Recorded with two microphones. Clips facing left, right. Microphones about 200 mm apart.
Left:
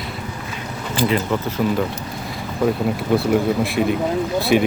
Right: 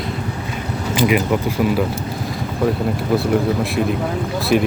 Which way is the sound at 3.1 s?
Centre (ahead or behind).